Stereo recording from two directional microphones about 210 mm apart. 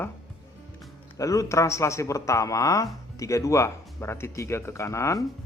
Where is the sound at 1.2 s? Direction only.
15° left (ahead or behind).